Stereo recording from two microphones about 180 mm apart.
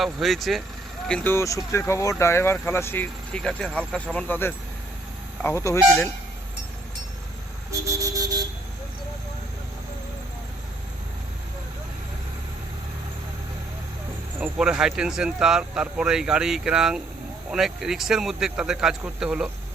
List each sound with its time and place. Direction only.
0.0 s speech: centre (ahead or behind)
7.7 s a sound: 20° right (ahead or behind)
14.3 s speech: 5° right (ahead or behind)